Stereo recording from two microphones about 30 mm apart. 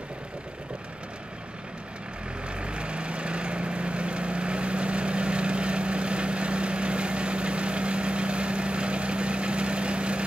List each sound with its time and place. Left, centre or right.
2.6 s vehicle: right